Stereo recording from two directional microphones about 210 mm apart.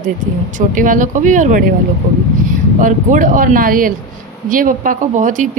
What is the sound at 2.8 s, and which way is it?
Speech, 40° right (ahead or behind).